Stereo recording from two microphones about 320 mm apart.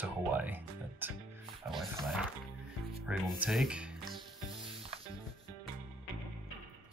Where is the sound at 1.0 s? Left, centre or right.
Centre.